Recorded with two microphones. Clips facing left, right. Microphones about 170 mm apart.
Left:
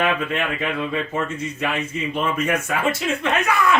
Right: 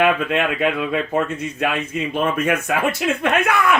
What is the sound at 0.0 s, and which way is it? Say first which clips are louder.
Speech: right 4 dB; 60° right (ahead or behind).